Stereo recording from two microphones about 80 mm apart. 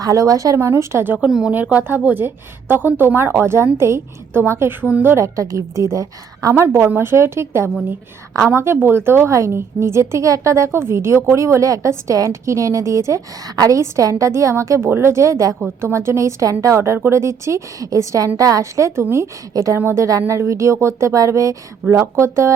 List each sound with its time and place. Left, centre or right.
0.0 s a woman's voice: right
1.3 s speech: centre
1.8 s a woman's voice: right
5.1 s a woman's voice: right
6.5 s a woman's voice: right
20.1 s a woman's voice: right